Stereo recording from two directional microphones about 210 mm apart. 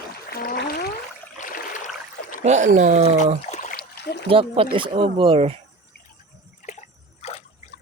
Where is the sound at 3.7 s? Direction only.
50° left (ahead or behind).